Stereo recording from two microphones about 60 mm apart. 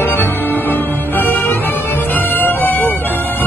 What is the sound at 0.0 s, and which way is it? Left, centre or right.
Music, left.